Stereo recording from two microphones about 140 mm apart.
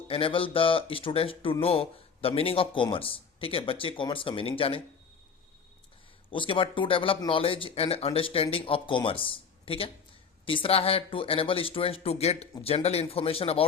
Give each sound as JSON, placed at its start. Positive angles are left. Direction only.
{"t": 0.1, "sound": "speech", "side_deg": 40}
{"t": 6.3, "sound": "speech", "side_deg": 40}